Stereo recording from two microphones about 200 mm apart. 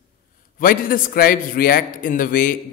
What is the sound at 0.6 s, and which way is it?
A man's voice, 45° left (ahead or behind).